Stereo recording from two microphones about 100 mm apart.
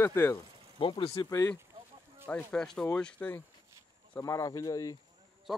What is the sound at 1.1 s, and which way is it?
Speech, 30° left (ahead or behind).